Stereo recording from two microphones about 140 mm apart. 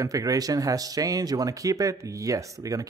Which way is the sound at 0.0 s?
25° right (ahead or behind).